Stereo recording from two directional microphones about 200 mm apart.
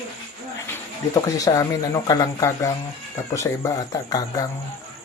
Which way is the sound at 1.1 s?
20° left (ahead or behind).